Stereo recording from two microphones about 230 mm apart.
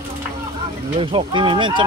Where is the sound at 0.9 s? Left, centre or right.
Right.